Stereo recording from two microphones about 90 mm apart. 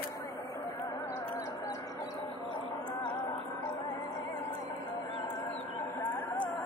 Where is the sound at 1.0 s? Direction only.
30° left (ahead or behind).